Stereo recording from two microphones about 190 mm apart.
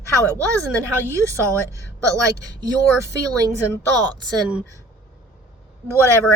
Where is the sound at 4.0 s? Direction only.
20° right (ahead or behind).